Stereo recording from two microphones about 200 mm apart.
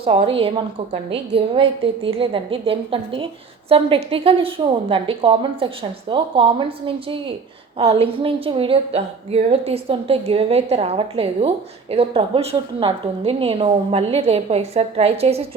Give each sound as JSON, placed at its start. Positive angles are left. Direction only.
{"t": 0.0, "sound": "a woman's voice", "side_deg": -30}